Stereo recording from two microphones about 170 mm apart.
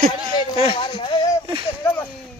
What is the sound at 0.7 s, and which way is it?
Speech, 30° left (ahead or behind).